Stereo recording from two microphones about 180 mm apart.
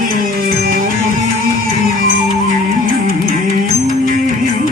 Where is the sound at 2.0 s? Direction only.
50° right (ahead or behind).